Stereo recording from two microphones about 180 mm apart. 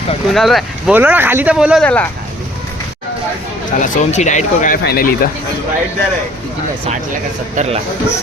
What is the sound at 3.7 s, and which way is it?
Speech, 40° left (ahead or behind).